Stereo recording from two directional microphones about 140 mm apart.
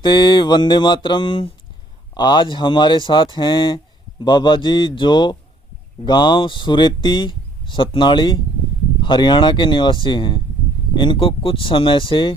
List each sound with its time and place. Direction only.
0.0 s speech: 30° left (ahead or behind)